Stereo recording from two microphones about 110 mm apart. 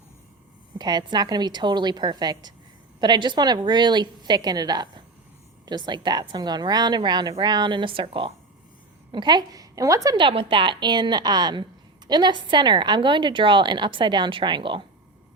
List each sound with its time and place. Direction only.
0.8 s a woman's voice: 40° right (ahead or behind)
9.1 s a woman's voice: 40° right (ahead or behind)
10.2 s a woman's voice: 50° right (ahead or behind)